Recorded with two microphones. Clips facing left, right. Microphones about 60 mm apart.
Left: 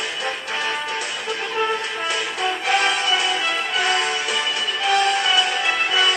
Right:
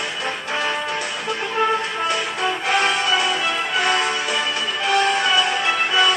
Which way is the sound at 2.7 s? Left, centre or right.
Centre.